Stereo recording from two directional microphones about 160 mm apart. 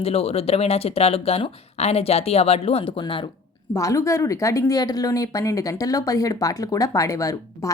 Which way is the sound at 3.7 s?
20° left (ahead or behind).